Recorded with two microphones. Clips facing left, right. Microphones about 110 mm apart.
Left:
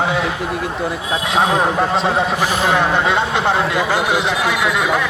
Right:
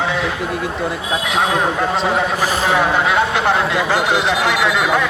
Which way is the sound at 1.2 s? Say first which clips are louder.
Left 2 dB; 30° left (ahead or behind).